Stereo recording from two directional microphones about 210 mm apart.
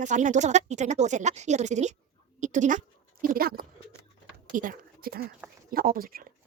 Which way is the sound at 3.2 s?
45° right (ahead or behind).